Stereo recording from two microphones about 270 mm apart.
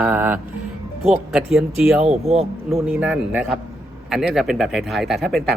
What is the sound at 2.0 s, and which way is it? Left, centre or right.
Speech, right.